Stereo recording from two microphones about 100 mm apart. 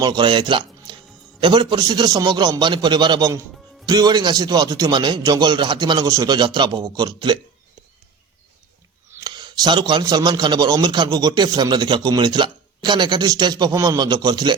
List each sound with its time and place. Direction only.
0.0 s a man's voice: 50° right (ahead or behind)
9.2 s a man's voice: 45° right (ahead or behind)